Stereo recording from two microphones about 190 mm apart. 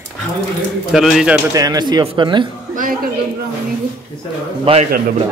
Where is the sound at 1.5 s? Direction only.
20° right (ahead or behind).